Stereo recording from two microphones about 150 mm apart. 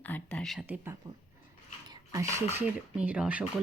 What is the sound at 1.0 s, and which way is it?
Speech, 25° right (ahead or behind).